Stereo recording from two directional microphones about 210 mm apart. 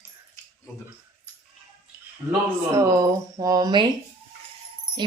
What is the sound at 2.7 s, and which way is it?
Speech, 15° right (ahead or behind).